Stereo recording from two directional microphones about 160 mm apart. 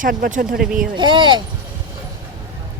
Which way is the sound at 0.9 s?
30° right (ahead or behind).